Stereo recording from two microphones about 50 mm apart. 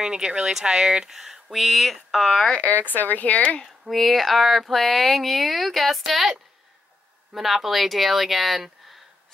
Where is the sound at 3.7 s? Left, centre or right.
Centre.